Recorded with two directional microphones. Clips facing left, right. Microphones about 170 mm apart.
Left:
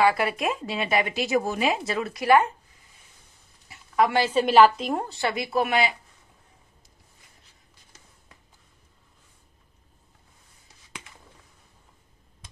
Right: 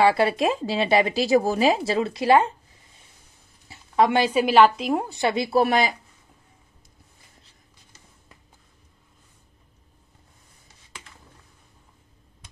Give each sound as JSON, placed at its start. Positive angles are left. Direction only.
{"t": 0.0, "sound": "speech", "side_deg": -30}
{"t": 3.6, "sound": "a sound", "side_deg": -30}
{"t": 4.6, "sound": "a woman's voice", "side_deg": 0}
{"t": 5.1, "sound": "speech", "side_deg": -20}
{"t": 5.4, "sound": "speech", "side_deg": -35}